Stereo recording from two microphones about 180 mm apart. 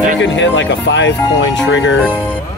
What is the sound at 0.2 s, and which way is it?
Speech, 90° left.